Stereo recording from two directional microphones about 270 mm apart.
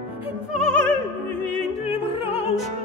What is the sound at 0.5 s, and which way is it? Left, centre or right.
Music, centre.